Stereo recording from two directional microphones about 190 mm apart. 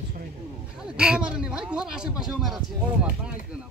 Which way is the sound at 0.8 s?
5° right (ahead or behind).